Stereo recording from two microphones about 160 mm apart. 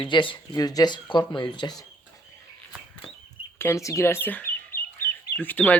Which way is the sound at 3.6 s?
15° left (ahead or behind).